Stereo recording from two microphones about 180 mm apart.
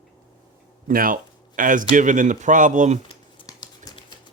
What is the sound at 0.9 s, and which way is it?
Speech, 50° right (ahead or behind).